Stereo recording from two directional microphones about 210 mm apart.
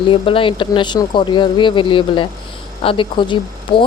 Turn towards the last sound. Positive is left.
turn(degrees=25)  # may be behind; listen again after turning